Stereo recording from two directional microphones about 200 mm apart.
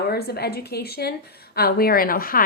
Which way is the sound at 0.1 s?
50° left (ahead or behind).